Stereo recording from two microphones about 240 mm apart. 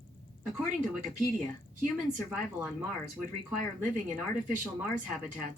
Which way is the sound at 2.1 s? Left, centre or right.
Centre.